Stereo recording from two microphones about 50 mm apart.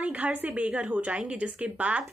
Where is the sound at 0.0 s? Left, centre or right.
Right.